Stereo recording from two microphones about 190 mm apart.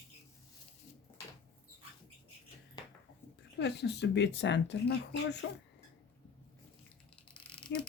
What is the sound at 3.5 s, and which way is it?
Speech, 65° left (ahead or behind).